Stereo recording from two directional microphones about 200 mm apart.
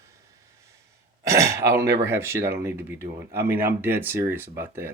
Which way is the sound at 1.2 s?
15° right (ahead or behind).